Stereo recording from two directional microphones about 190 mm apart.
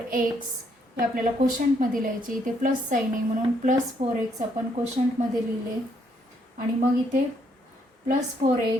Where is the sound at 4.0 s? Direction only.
35° right (ahead or behind).